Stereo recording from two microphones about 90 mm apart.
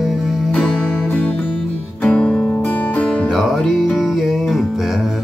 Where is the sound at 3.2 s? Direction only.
Centre (ahead or behind).